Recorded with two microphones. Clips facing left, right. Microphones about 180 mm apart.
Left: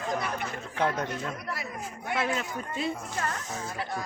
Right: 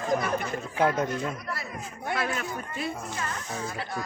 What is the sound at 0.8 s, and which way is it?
Speech, 5° right (ahead or behind).